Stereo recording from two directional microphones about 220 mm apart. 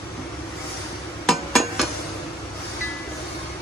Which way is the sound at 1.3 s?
Centre (ahead or behind).